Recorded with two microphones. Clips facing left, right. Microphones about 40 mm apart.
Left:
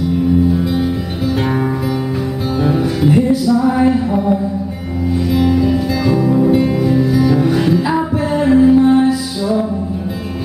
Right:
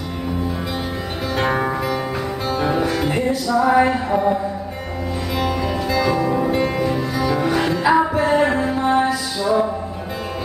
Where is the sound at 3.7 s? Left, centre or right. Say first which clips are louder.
Left 2 dB; centre.